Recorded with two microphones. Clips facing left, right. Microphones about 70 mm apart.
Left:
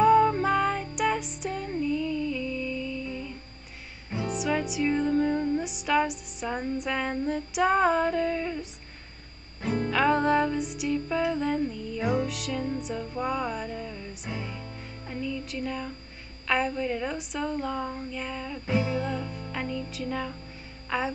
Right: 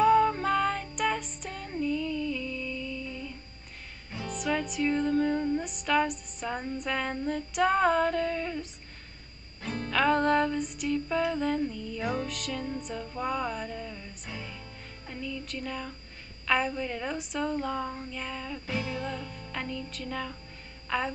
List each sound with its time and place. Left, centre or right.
0.0 s music: centre
9.6 s music: left
9.8 s music: centre
15.0 s speech: centre
16.4 s music: centre
18.7 s music: left
19.5 s speech: centre
20.9 s music: centre